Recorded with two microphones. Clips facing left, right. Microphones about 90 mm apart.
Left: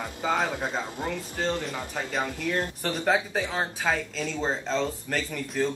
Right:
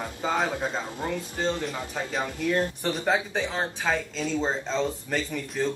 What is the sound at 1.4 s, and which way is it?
Speech, centre (ahead or behind).